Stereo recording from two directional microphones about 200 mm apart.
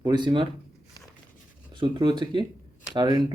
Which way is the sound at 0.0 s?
20° right (ahead or behind).